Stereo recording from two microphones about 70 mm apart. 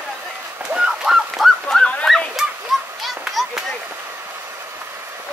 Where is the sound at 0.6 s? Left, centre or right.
Centre.